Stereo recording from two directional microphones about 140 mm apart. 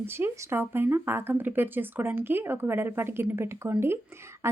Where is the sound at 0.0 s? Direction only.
15° right (ahead or behind).